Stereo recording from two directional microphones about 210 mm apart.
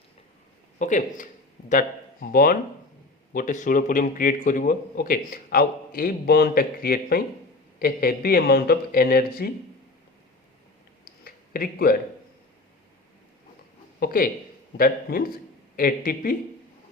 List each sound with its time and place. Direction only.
0.8 s a man's voice: 35° left (ahead or behind)
11.0 s a sound: 45° left (ahead or behind)
14.0 s a man's voice: 45° left (ahead or behind)